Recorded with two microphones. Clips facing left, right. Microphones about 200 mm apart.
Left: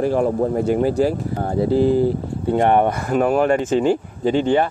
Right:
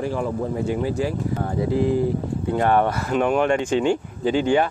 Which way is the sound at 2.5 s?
20° left (ahead or behind).